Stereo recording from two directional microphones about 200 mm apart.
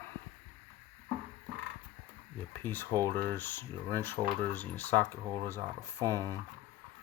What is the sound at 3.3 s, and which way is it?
Speech, 10° left (ahead or behind).